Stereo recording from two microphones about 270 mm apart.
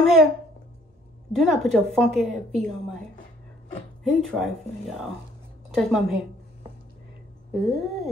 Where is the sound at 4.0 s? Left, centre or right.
Centre.